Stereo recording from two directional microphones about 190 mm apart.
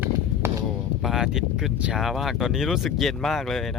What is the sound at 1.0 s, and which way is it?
Speech, centre (ahead or behind).